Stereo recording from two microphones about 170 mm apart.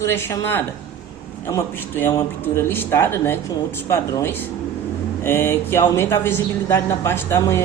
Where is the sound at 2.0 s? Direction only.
15° left (ahead or behind).